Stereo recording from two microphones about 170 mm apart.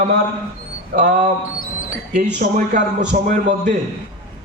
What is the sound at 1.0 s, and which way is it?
Speech, 45° right (ahead or behind).